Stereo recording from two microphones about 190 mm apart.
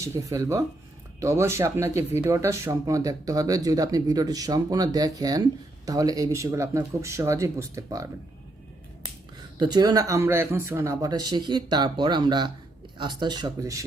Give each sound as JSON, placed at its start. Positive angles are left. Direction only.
{"t": 0.0, "sound": "speech", "side_deg": -15}
{"t": 9.6, "sound": "speech", "side_deg": -20}